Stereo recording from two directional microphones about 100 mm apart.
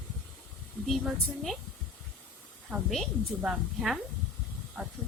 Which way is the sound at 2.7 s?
25° right (ahead or behind).